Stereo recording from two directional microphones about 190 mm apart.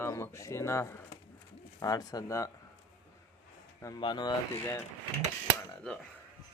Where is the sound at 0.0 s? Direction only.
15° left (ahead or behind).